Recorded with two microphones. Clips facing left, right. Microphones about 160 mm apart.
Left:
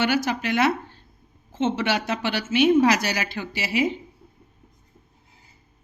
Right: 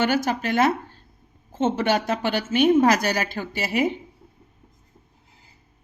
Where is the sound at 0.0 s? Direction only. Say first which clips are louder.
Right 1 dB; 45° right (ahead or behind).